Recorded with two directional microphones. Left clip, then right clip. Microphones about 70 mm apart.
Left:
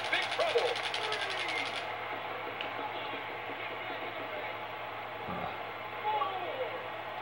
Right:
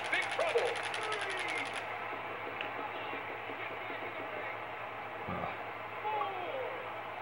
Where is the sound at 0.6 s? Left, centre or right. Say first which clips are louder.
Left 2 dB; right.